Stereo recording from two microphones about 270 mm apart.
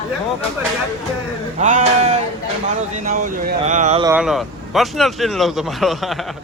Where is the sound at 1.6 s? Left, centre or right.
Right.